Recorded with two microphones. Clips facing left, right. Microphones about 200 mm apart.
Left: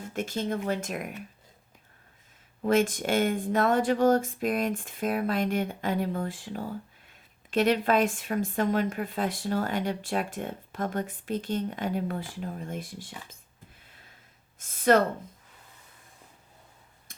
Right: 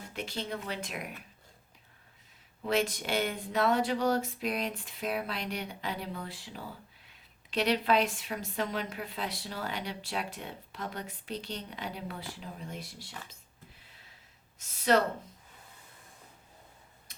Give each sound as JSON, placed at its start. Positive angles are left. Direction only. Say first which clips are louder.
{"t": 0.1, "sound": "a woman's voice", "louder": "left 7 dB", "side_deg": 45}
{"t": 2.6, "sound": "a woman's voice", "louder": "left 6 dB", "side_deg": 50}
{"t": 14.6, "sound": "speech", "louder": "left 5 dB", "side_deg": 50}
{"t": 17.1, "sound": "tick", "louder": "left 6 dB", "side_deg": 50}